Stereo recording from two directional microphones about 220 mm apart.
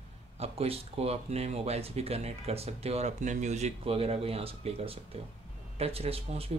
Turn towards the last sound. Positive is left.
turn(degrees=-25)  # may be behind; listen again after turning